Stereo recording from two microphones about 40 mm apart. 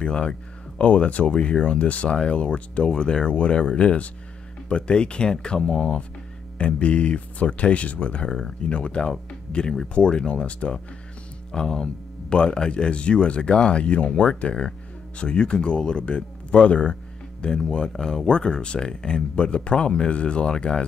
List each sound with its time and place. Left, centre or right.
0.0 s speech: left
8.3 s speech: centre
8.6 s speech: left
11.5 s speech: centre